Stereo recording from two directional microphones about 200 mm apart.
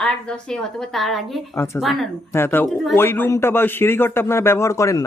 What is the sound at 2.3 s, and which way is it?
A man's voice, 10° left (ahead or behind).